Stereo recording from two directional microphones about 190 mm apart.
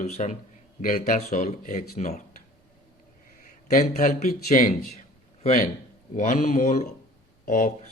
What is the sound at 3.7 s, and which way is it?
Speech, 40° left (ahead or behind).